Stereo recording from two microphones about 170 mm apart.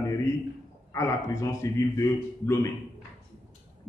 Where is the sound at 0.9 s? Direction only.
20° left (ahead or behind).